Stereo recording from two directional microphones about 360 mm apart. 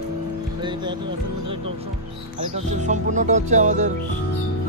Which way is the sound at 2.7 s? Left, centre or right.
Centre.